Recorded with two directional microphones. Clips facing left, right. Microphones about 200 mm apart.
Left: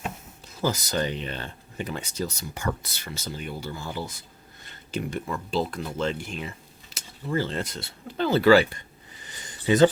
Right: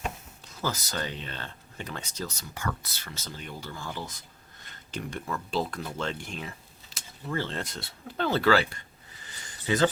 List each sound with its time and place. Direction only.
0.6 s speech: 15° left (ahead or behind)
9.6 s speech: 20° left (ahead or behind)